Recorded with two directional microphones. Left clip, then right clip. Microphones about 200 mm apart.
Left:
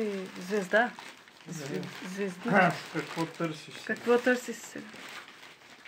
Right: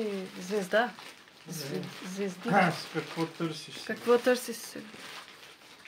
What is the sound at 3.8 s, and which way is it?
A child's voice, 5° left (ahead or behind).